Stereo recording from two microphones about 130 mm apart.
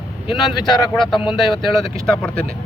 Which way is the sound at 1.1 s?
40° left (ahead or behind).